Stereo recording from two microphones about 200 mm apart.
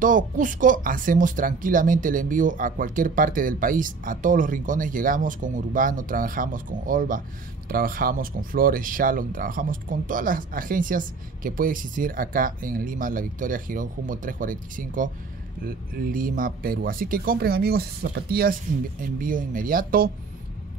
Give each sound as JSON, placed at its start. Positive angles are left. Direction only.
{"t": 0.0, "sound": "speech", "side_deg": -40}